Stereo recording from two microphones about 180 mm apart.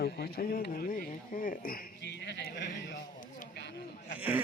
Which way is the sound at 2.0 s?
75° left (ahead or behind).